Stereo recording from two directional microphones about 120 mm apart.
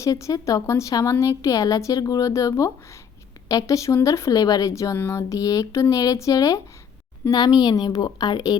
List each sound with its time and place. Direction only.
0.0 s a woman's voice: 25° left (ahead or behind)